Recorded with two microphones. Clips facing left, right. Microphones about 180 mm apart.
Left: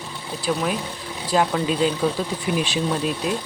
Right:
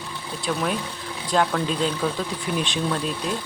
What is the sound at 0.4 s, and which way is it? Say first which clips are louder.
Speech: left 2 dB; 5° left (ahead or behind).